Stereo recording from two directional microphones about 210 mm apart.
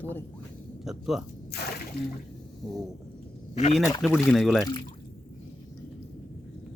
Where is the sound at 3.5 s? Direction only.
35° left (ahead or behind).